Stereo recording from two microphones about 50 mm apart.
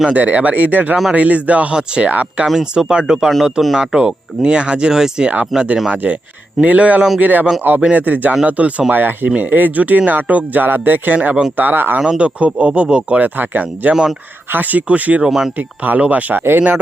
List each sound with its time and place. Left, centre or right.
0.1 s speech: right
2.0 s speech: right
2.7 s speech: centre
5.5 s speech: centre
5.9 s speech: right
8.9 s speech: right
11.9 s speech: right
15.3 s speech: centre
15.5 s speech: right